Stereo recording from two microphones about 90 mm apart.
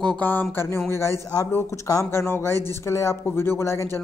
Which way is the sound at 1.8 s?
40° left (ahead or behind).